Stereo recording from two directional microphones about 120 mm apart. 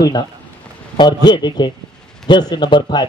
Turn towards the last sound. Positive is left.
turn(degrees=35)  # may be behind; listen again after turning